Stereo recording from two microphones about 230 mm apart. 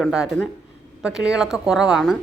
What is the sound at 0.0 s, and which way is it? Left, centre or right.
Speech, centre.